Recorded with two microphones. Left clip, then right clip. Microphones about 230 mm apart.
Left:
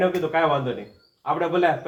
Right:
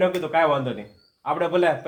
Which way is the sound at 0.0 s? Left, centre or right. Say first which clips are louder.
Right 1 dB; right.